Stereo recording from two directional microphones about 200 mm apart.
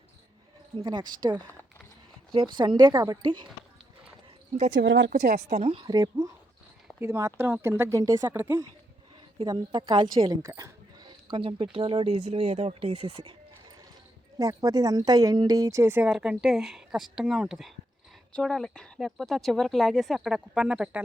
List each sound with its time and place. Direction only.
0.8 s a woman's voice: 20° right (ahead or behind)
4.7 s a woman's voice: 65° right (ahead or behind); by 5.5 s 50° right (ahead or behind)
5.5 s a woman's voice: 25° right (ahead or behind)
14.3 s a woman's voice: 15° right (ahead or behind)